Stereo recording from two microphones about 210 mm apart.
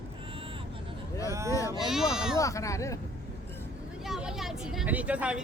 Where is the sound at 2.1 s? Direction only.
5° right (ahead or behind).